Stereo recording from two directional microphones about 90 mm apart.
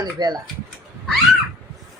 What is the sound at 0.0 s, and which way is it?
Speech, 50° right (ahead or behind).